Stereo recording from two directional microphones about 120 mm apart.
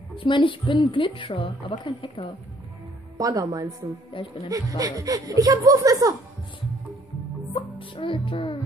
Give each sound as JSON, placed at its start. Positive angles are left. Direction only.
{"t": 0.1, "sound": "a woman's voice", "side_deg": 45}
{"t": 3.2, "sound": "a woman's voice", "side_deg": -30}
{"t": 4.1, "sound": "a woman's voice", "side_deg": 45}
{"t": 4.5, "sound": "a woman's voice", "side_deg": -30}
{"t": 7.5, "sound": "music", "side_deg": 45}